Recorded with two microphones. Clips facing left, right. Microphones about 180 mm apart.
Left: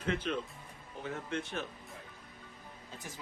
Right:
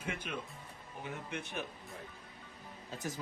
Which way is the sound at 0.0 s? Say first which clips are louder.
Left 6 dB; 10° right (ahead or behind).